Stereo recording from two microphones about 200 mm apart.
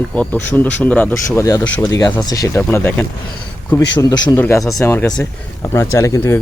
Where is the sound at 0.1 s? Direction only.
5° left (ahead or behind).